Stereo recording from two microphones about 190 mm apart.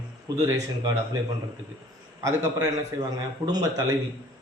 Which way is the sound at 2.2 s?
20° right (ahead or behind).